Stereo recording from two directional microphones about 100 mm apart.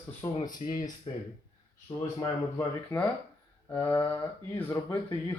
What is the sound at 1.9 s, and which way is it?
Speech, 40° left (ahead or behind).